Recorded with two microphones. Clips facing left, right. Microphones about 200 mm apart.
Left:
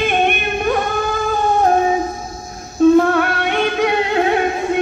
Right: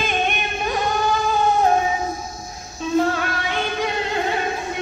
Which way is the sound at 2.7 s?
55° left (ahead or behind).